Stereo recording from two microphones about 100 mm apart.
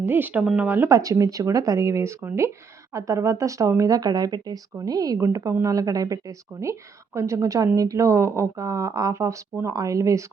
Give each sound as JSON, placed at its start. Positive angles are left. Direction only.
{"t": 0.0, "sound": "speech", "side_deg": -20}
{"t": 0.9, "sound": "speech", "side_deg": -35}